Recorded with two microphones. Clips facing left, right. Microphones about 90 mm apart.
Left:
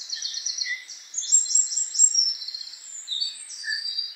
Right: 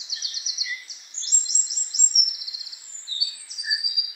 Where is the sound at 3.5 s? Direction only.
15° right (ahead or behind).